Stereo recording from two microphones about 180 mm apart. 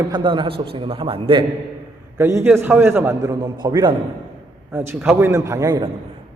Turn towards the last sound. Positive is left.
turn(degrees=-20)  # may be behind; listen again after turning